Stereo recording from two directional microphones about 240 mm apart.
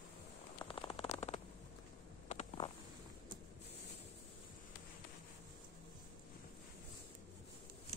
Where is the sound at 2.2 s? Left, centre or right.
Left.